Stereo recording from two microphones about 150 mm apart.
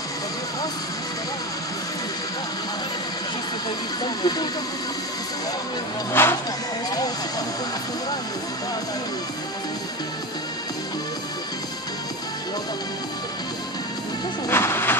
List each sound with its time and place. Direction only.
4.0 s speech: 30° left (ahead or behind)
6.2 s speech: 15° left (ahead or behind)
14.5 s a sound: 15° left (ahead or behind)